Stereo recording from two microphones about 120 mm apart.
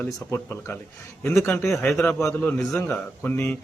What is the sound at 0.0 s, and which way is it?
Speech, 20° left (ahead or behind).